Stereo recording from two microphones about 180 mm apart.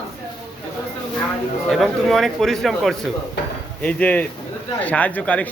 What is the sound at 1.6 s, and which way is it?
A man's voice, centre (ahead or behind).